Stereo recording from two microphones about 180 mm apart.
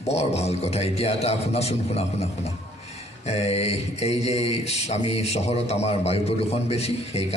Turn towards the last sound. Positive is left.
turn(degrees=35)  # may be behind; listen again after turning